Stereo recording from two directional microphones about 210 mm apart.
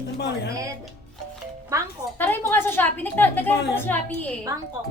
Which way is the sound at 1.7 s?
15° right (ahead or behind).